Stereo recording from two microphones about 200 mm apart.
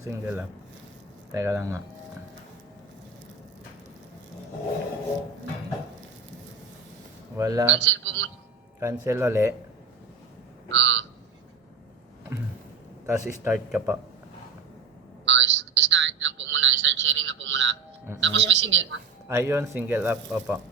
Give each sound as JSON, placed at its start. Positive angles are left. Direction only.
{"t": 0.0, "sound": "speech", "side_deg": -10}
{"t": 7.3, "sound": "speech", "side_deg": -15}
{"t": 7.7, "sound": "a man's voice", "side_deg": -65}
{"t": 8.8, "sound": "speech", "side_deg": -15}
{"t": 10.7, "sound": "frog", "side_deg": -70}
{"t": 13.1, "sound": "speech", "side_deg": -10}
{"t": 15.2, "sound": "telephone", "side_deg": -65}
{"t": 18.2, "sound": "speech", "side_deg": -65}
{"t": 19.3, "sound": "speech", "side_deg": -10}